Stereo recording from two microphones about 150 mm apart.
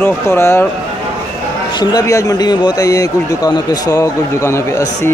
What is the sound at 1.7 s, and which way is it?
Speech, 25° left (ahead or behind).